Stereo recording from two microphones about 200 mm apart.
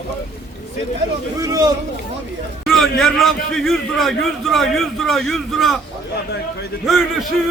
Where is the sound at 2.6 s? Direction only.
Centre (ahead or behind).